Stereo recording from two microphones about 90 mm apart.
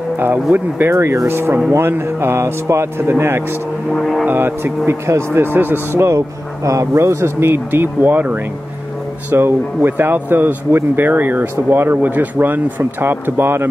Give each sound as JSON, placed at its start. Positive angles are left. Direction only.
{"t": 0.2, "sound": "speech", "side_deg": -20}
{"t": 3.9, "sound": "speech", "side_deg": 0}
{"t": 4.3, "sound": "speech", "side_deg": -25}